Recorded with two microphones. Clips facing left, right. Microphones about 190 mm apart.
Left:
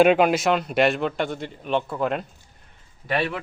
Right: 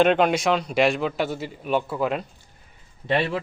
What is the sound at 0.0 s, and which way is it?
Speech, 5° left (ahead or behind).